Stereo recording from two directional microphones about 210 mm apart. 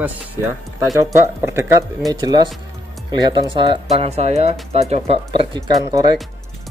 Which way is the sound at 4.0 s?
30° right (ahead or behind).